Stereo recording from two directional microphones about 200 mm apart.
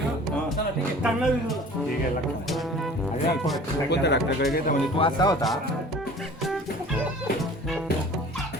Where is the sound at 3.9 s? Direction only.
55° left (ahead or behind).